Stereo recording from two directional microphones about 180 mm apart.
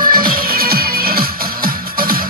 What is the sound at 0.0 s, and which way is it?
Music, 55° right (ahead or behind).